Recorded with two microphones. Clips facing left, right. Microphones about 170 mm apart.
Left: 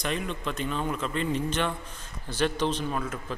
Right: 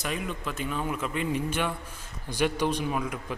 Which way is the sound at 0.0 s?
5° right (ahead or behind).